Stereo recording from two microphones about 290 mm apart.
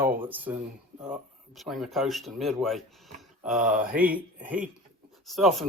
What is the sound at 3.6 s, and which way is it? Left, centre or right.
Speech, right.